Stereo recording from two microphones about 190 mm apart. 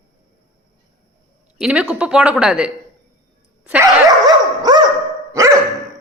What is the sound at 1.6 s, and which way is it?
A woman's voice, 5° right (ahead or behind).